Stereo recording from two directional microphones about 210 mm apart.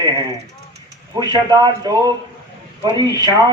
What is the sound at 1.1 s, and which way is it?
Speech, 20° right (ahead or behind).